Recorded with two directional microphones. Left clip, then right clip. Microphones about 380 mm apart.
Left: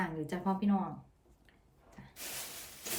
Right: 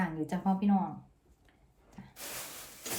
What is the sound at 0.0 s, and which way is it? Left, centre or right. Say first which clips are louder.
Speech: right 2 dB; centre.